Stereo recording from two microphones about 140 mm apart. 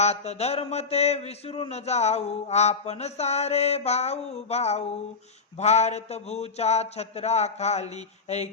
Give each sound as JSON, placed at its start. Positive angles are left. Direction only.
{"t": 0.0, "sound": "a man's voice", "side_deg": 50}